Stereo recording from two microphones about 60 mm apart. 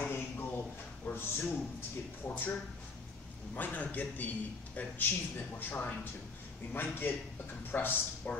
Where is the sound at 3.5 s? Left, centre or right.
Left.